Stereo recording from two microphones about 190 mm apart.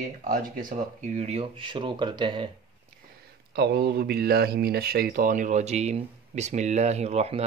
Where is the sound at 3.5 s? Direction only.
55° right (ahead or behind).